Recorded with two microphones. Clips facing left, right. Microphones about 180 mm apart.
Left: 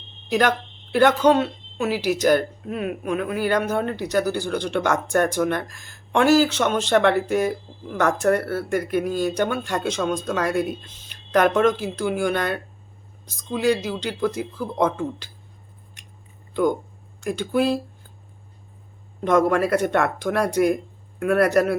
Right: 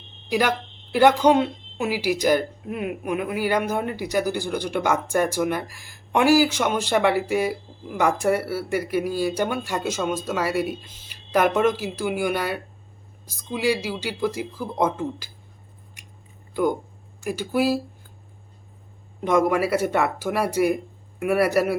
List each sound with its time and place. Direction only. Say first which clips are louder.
0.3 s speech: left 2 dB; 10° right (ahead or behind)
17.2 s speech: left 1 dB; 5° right (ahead or behind)
19.2 s speech: left 1 dB; 10° right (ahead or behind)